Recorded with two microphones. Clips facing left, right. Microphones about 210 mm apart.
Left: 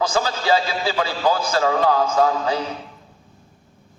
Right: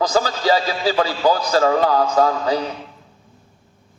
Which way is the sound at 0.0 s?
40° right (ahead or behind).